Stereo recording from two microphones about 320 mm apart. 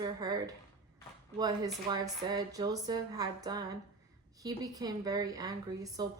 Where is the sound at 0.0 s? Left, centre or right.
Centre.